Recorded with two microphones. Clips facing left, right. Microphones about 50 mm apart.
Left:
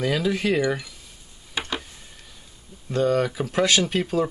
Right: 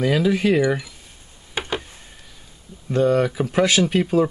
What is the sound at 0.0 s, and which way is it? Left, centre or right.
Speech, centre.